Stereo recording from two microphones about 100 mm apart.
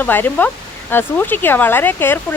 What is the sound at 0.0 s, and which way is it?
Speech, 20° left (ahead or behind).